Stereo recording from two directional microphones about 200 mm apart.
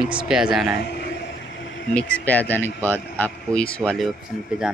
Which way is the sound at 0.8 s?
55° left (ahead or behind).